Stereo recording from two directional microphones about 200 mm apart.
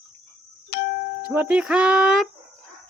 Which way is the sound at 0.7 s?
55° left (ahead or behind).